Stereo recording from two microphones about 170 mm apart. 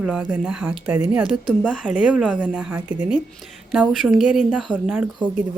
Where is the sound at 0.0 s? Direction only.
5° right (ahead or behind).